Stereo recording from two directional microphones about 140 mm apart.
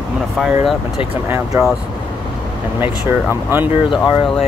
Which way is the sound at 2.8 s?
15° right (ahead or behind).